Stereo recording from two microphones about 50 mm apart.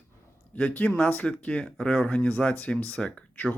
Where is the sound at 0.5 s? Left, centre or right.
Left; by 2.8 s centre.